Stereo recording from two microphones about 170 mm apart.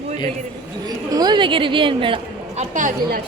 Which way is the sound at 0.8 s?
25° right (ahead or behind).